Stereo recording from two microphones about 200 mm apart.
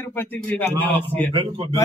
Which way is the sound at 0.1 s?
10° left (ahead or behind).